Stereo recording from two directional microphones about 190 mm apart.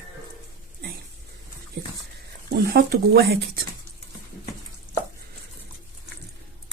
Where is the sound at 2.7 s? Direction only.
55° right (ahead or behind).